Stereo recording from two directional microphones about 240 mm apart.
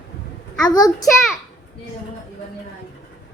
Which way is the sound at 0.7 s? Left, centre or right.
Centre.